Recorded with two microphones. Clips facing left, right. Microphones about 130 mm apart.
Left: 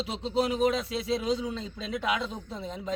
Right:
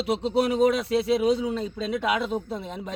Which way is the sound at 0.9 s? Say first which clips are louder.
Right 7 dB; 65° right (ahead or behind).